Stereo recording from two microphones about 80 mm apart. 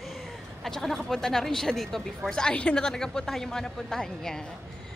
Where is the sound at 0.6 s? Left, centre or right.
Centre.